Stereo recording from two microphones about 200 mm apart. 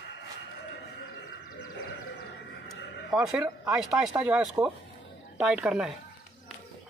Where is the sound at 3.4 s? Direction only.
5° right (ahead or behind).